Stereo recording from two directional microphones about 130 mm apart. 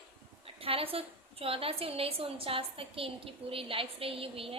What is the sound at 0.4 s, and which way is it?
A woman's voice, 45° right (ahead or behind).